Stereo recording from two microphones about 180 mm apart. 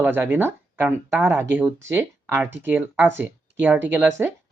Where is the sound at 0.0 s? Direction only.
10° right (ahead or behind).